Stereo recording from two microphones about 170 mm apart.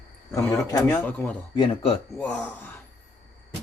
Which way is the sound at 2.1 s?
5° left (ahead or behind).